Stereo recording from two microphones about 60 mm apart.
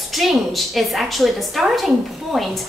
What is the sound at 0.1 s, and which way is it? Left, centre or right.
A woman's voice, centre.